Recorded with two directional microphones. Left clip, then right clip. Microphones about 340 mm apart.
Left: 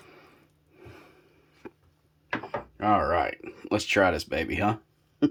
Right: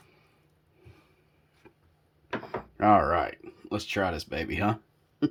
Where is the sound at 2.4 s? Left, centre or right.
Centre.